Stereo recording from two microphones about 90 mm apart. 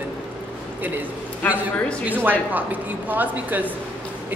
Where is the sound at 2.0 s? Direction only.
20° right (ahead or behind).